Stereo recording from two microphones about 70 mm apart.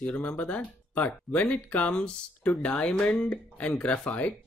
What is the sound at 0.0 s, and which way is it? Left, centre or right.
Speech, left.